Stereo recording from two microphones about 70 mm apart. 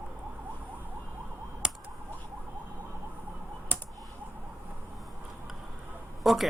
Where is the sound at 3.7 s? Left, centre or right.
Left.